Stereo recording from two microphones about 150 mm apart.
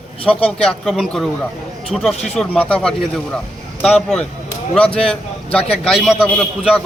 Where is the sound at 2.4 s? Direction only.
5° left (ahead or behind).